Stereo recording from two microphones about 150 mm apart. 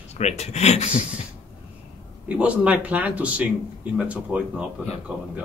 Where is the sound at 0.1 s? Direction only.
45° left (ahead or behind).